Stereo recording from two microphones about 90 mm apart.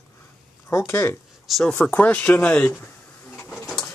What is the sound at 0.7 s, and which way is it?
Speech, 30° left (ahead or behind).